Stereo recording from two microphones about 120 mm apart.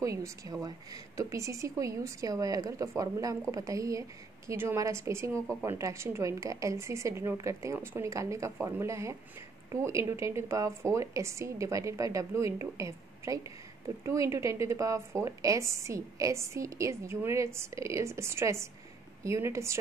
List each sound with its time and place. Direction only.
0.0 s a woman's voice: 25° right (ahead or behind)